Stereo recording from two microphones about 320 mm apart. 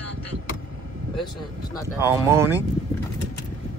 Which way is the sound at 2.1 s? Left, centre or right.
Centre.